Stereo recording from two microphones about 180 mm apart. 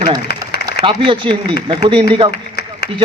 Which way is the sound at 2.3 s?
65° left (ahead or behind).